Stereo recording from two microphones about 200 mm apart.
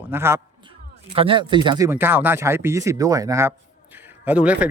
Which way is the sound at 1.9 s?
10° right (ahead or behind).